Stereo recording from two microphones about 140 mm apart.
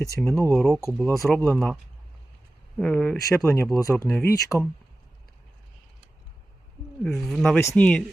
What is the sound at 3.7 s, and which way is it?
Speech, 20° left (ahead or behind).